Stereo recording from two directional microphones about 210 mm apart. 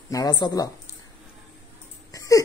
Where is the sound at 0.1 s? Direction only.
15° left (ahead or behind).